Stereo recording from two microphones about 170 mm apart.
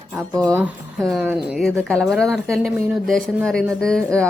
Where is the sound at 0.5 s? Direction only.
10° right (ahead or behind).